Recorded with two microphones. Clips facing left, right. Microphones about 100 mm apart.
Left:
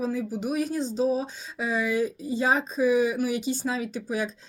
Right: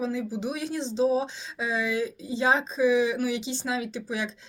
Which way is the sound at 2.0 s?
50° left (ahead or behind).